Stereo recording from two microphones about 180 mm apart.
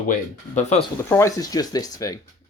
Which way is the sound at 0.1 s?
40° left (ahead or behind).